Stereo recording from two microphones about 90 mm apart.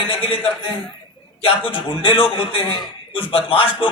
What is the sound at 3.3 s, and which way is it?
Speech, 90° left.